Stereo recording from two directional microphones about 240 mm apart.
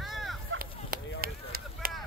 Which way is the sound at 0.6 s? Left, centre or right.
Right.